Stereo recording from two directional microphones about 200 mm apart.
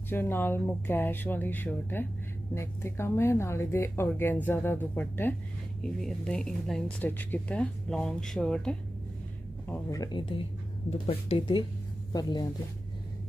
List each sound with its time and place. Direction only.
0.1 s speech: 10° left (ahead or behind)
9.7 s speech: 15° left (ahead or behind)